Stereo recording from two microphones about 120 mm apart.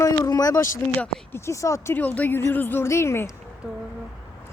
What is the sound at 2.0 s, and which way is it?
Speech, 15° left (ahead or behind).